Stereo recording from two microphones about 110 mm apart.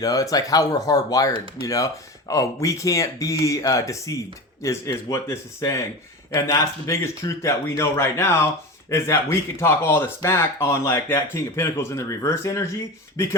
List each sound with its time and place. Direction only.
0.0 s speech: 35° left (ahead or behind)